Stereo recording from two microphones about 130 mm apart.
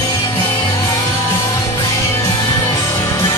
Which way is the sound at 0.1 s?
30° left (ahead or behind).